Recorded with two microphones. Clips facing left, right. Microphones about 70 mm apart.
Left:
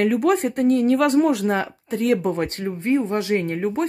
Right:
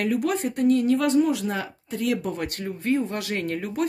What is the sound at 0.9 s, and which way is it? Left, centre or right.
Speech, left.